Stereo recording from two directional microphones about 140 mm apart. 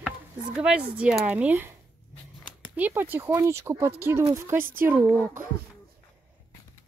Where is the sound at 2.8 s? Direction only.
15° right (ahead or behind).